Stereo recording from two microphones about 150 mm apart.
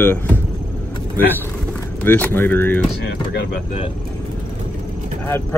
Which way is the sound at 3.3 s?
90° left.